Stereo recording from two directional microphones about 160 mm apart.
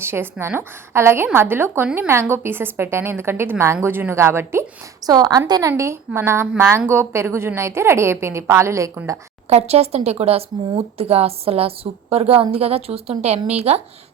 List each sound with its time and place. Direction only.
0.0 s a woman's voice: 15° right (ahead or behind)
9.5 s a woman's voice: 40° right (ahead or behind)